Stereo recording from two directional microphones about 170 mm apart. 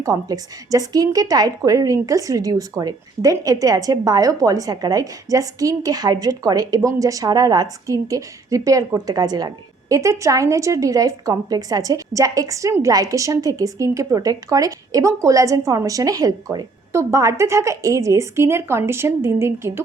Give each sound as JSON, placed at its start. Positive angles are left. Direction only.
{"t": 0.0, "sound": "a woman's voice", "side_deg": -20}